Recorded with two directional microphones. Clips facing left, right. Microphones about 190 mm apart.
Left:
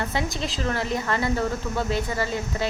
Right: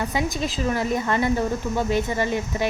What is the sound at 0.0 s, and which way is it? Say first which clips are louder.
A woman's voice: right 3 dB; 15° right (ahead or behind).